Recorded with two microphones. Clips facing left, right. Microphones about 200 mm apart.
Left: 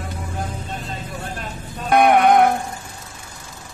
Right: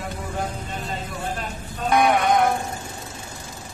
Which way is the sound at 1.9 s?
60° left (ahead or behind).